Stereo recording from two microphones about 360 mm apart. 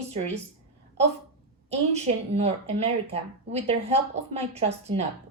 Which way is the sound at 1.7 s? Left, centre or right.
Centre.